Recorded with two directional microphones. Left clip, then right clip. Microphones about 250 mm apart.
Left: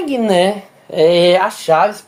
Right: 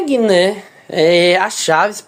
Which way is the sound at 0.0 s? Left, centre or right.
Centre.